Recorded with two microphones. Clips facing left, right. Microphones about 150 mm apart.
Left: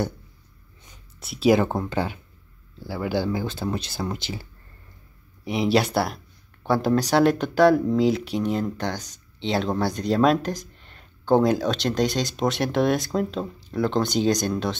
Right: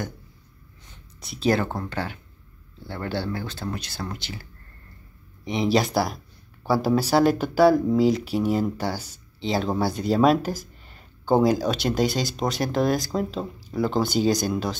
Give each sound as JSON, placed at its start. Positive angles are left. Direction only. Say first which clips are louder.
{"t": 1.2, "sound": "speech", "louder": "left 4 dB", "side_deg": 0}
{"t": 1.5, "sound": "speech", "louder": "left 4 dB", "side_deg": 20}
{"t": 5.4, "sound": "speech", "louder": "left 1 dB", "side_deg": 5}